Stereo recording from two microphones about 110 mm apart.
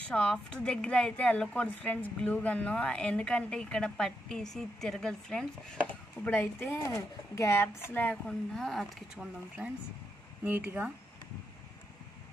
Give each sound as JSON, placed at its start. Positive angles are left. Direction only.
{"t": 0.1, "sound": "a woman's voice", "side_deg": 10}
{"t": 9.1, "sound": "speech", "side_deg": -5}
{"t": 10.4, "sound": "speech", "side_deg": -15}